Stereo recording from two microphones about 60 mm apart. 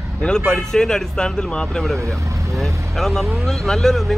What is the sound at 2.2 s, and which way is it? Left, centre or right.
Vehicle, right.